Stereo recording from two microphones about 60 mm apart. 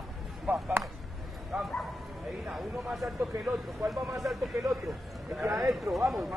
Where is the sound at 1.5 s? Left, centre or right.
Centre.